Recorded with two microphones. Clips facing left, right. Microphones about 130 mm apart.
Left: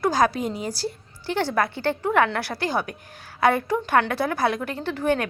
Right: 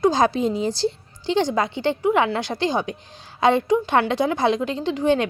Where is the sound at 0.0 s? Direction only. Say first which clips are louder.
Right 3 dB; 25° right (ahead or behind).